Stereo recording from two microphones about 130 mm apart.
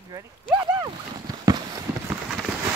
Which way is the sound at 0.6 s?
25° right (ahead or behind).